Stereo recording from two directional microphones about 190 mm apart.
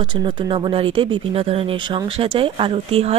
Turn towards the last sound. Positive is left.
turn(degrees=-30)  # may be behind; listen again after turning